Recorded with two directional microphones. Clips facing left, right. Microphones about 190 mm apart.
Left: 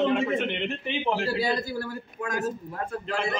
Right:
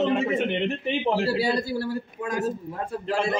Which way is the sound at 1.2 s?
30° right (ahead or behind).